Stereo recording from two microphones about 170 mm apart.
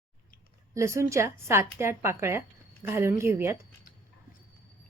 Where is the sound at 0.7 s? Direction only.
15° right (ahead or behind).